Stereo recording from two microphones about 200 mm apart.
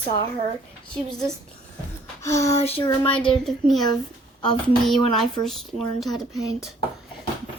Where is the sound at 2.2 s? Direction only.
15° left (ahead or behind).